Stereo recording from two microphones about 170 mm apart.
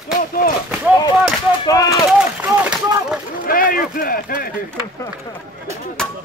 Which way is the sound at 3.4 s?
55° left (ahead or behind).